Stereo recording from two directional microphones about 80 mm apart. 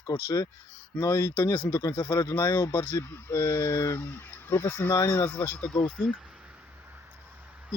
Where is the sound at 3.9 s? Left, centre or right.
Left.